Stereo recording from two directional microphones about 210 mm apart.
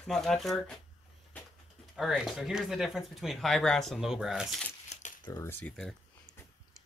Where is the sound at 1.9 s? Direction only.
Centre (ahead or behind).